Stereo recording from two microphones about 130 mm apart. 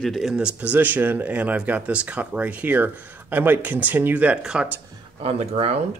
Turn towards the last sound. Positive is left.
turn(degrees=-50)  # may be behind; listen again after turning